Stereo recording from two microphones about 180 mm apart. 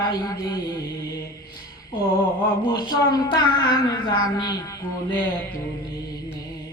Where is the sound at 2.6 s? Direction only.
20° left (ahead or behind).